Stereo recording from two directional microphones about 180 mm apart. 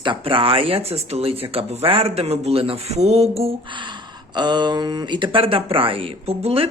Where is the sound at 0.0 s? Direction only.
30° right (ahead or behind).